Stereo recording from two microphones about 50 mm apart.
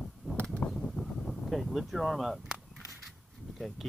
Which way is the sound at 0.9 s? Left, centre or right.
Centre.